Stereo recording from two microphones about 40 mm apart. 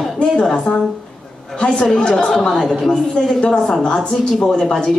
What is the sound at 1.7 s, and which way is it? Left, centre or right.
A woman's voice, centre.